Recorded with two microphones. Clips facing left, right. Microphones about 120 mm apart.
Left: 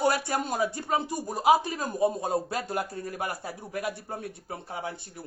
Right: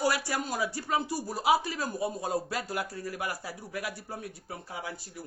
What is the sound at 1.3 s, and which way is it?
Speech, 45° left (ahead or behind).